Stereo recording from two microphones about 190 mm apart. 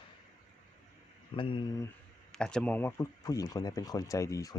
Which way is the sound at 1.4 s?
25° left (ahead or behind).